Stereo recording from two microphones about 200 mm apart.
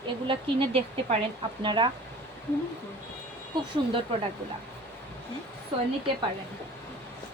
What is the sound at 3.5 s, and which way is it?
Speech, 20° right (ahead or behind).